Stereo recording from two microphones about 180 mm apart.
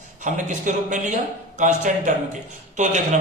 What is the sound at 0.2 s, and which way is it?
Speech, 45° right (ahead or behind).